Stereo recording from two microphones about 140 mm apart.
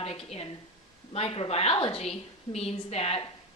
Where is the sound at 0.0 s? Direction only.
45° left (ahead or behind).